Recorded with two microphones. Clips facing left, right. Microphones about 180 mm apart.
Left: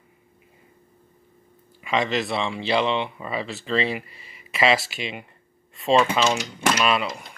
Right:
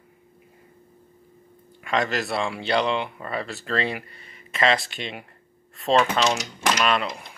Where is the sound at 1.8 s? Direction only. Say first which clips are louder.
Left 1 dB; centre (ahead or behind).